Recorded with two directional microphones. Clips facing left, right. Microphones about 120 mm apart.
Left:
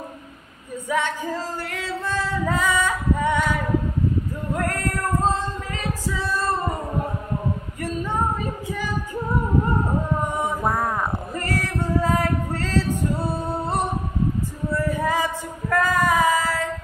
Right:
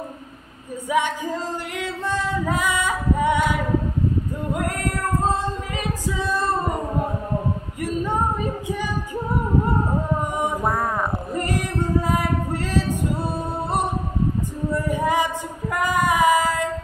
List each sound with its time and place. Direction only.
0.8 s music: 15° right (ahead or behind)
1.7 s female singing: 15° right (ahead or behind)
5.8 s singing: 15° right (ahead or behind)
10.6 s a sound: centre (ahead or behind)
11.4 s female singing: 15° right (ahead or behind)
14.9 s a sound: 15° right (ahead or behind)
15.7 s child singing: 15° right (ahead or behind)